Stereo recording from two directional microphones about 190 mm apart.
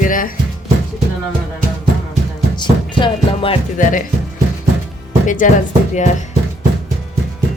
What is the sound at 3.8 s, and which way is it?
Speech, 45° left (ahead or behind).